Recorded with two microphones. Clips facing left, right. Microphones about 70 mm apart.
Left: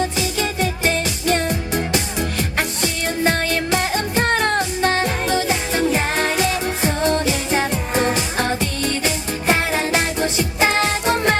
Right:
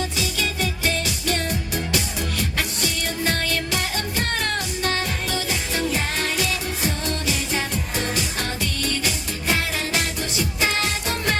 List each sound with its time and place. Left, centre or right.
0.0 s music: left